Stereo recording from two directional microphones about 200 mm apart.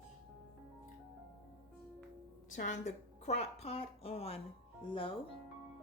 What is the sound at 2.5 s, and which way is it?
A woman's voice, 40° left (ahead or behind).